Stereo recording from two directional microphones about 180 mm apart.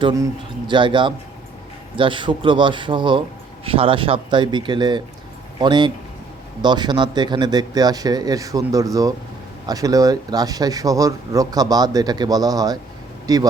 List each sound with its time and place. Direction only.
0.0 s speech: 20° right (ahead or behind)